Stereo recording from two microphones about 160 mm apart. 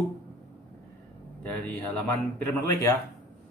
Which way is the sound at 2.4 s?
15° left (ahead or behind).